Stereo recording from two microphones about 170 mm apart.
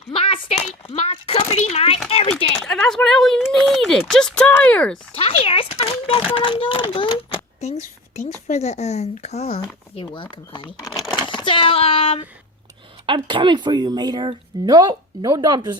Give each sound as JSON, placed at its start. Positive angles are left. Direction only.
{"t": 0.1, "sound": "a sound", "side_deg": 35}
{"t": 2.0, "sound": "speech", "side_deg": 35}
{"t": 2.6, "sound": "speech", "side_deg": 5}
{"t": 5.1, "sound": "a child's voice", "side_deg": 35}
{"t": 13.1, "sound": "speech", "side_deg": -30}